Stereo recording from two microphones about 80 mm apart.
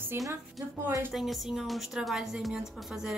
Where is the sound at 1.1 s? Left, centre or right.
Centre.